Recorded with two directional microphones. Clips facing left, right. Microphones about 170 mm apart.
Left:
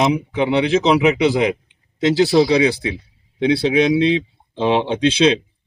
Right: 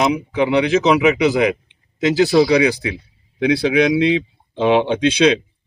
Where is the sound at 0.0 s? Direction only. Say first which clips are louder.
Even; 30° left (ahead or behind).